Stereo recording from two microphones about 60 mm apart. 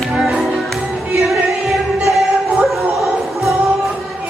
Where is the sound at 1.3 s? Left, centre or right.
Centre.